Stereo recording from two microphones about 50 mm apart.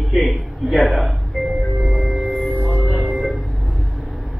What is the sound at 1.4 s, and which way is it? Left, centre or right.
Music, centre.